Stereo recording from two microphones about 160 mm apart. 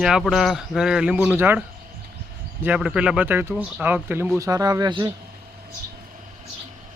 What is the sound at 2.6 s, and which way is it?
Speech, 5° right (ahead or behind).